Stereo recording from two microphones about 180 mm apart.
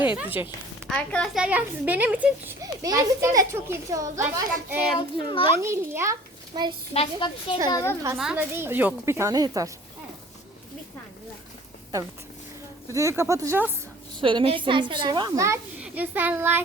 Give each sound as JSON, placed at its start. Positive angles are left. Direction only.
{"t": 0.0, "sound": "speech", "side_deg": -10}
{"t": 0.9, "sound": "speech", "side_deg": 5}
{"t": 4.9, "sound": "a child's voice", "side_deg": 30}
{"t": 5.6, "sound": "speech", "side_deg": -15}
{"t": 6.5, "sound": "a child's voice", "side_deg": -25}
{"t": 6.9, "sound": "a woman's voice", "side_deg": 35}
{"t": 7.7, "sound": "a child's voice", "side_deg": 20}
{"t": 8.2, "sound": "speech", "side_deg": -10}
{"t": 12.9, "sound": "speech", "side_deg": -15}
{"t": 14.2, "sound": "a child's voice", "side_deg": -30}